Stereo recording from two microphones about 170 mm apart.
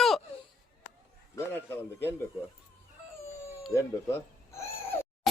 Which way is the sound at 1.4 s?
10° left (ahead or behind).